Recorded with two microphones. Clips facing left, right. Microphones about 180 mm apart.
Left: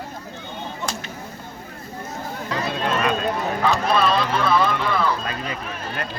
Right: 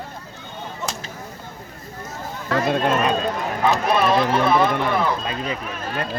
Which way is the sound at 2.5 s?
50° right (ahead or behind).